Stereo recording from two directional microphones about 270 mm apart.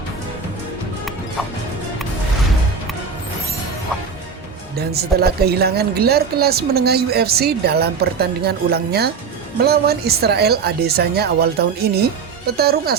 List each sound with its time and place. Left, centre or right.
4.9 s speech: right